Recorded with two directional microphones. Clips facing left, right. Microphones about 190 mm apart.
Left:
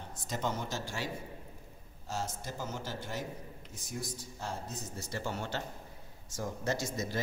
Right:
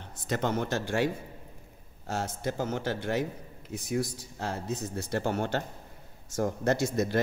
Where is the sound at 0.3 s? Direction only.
65° right (ahead or behind).